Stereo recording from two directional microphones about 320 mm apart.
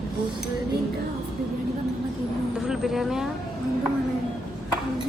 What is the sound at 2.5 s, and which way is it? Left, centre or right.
Speech, centre.